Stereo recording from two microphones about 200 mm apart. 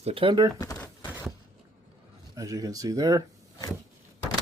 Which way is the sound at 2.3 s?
15° right (ahead or behind).